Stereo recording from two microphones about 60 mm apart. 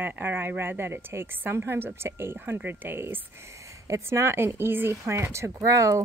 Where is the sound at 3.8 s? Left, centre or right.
Right.